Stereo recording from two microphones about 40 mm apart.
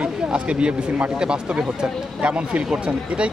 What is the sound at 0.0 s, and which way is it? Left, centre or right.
Speech, right.